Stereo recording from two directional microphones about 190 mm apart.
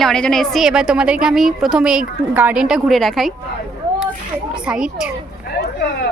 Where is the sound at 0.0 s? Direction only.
5° left (ahead or behind).